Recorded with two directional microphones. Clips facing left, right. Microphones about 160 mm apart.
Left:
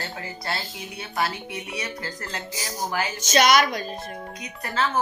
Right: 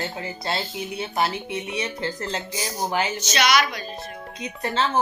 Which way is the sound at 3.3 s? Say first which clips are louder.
Left 3 dB; 45° left (ahead or behind).